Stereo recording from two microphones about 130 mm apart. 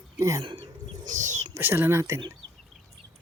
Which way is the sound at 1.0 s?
75° right (ahead or behind).